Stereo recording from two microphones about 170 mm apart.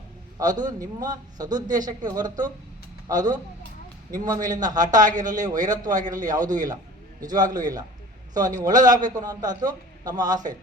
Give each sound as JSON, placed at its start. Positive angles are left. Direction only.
{"t": 0.3, "sound": "a man's voice", "side_deg": -25}
{"t": 5.9, "sound": "speech", "side_deg": -50}
{"t": 6.1, "sound": "a man's voice", "side_deg": -20}